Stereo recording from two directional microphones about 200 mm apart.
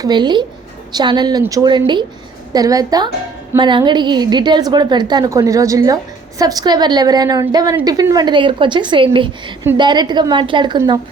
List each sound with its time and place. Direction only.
0.0 s a woman's voice: 20° right (ahead or behind)